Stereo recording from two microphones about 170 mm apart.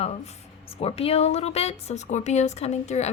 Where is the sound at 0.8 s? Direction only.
35° left (ahead or behind).